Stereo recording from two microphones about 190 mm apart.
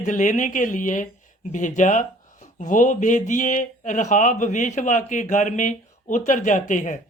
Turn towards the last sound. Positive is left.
turn(degrees=40)  # may be behind; listen again after turning